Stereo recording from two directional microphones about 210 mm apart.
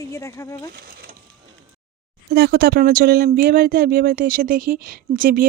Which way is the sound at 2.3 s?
50° right (ahead or behind).